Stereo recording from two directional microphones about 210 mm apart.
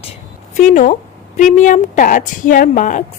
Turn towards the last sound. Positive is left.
turn(degrees=35)  # may be behind; listen again after turning